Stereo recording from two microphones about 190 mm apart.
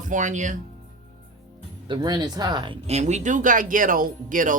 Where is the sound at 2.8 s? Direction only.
35° right (ahead or behind).